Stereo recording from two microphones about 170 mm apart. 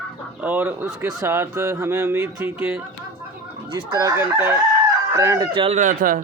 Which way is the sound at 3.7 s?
20° right (ahead or behind).